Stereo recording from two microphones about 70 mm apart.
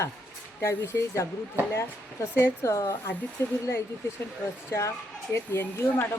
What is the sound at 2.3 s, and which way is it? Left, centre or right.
Speech, left.